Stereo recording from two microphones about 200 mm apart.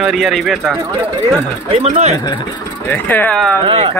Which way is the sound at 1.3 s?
25° right (ahead or behind).